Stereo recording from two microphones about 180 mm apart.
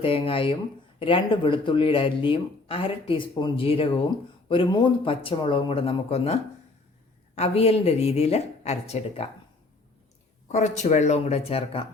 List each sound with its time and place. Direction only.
0.0 s speech: 30° left (ahead or behind)
7.3 s speech: 35° left (ahead or behind)
10.5 s speech: 40° left (ahead or behind)